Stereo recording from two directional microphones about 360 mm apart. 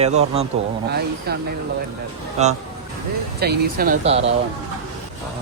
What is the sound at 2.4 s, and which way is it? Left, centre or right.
A man's voice, centre.